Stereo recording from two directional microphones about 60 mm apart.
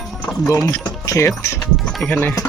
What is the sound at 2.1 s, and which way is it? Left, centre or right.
Speech, left.